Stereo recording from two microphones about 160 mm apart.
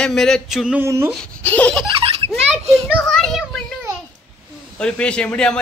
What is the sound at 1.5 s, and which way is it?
Laughter, 10° left (ahead or behind).